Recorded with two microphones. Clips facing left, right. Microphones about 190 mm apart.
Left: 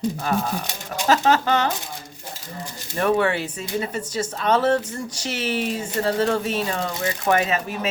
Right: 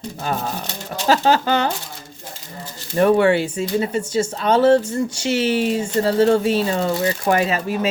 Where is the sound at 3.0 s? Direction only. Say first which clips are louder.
Right 6 dB; 30° right (ahead or behind).